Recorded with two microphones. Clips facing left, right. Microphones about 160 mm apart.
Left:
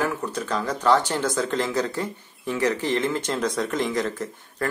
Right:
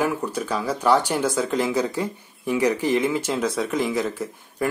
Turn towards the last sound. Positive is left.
turn(degrees=-10)  # may be behind; listen again after turning